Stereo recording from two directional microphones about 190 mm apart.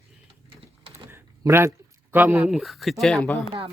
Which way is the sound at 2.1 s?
10° right (ahead or behind).